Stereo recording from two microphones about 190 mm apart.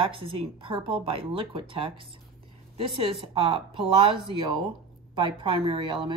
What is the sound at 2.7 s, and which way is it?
A woman's voice, 30° right (ahead or behind).